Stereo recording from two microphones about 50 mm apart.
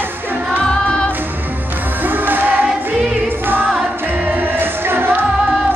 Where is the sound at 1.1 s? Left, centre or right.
Right.